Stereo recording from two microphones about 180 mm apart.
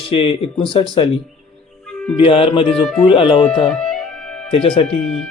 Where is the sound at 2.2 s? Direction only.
30° left (ahead or behind).